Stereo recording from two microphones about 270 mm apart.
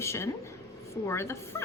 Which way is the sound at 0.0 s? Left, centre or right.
Centre.